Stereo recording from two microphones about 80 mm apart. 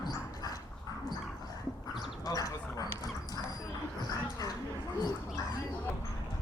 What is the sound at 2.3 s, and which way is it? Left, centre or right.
Duck, left.